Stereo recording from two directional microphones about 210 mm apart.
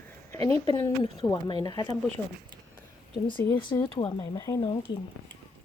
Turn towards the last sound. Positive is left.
turn(degrees=25)  # may be behind; listen again after turning